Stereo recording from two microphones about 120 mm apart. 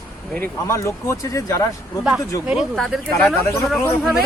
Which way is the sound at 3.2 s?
20° left (ahead or behind).